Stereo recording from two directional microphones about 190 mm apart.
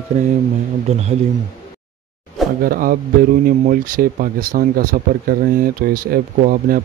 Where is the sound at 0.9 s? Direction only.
35° right (ahead or behind).